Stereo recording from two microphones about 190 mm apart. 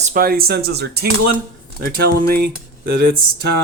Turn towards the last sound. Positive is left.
turn(degrees=-55)  # may be behind; listen again after turning